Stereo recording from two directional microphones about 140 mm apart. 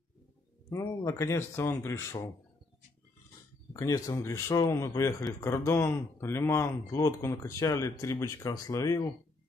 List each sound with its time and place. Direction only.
0.7 s speech: 20° left (ahead or behind)
3.7 s speech: 25° left (ahead or behind)